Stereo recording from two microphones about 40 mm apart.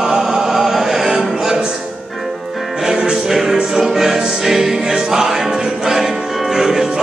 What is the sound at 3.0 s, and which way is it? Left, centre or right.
Music, centre.